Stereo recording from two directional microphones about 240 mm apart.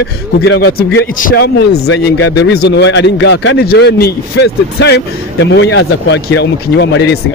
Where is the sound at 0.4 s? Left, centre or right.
Left.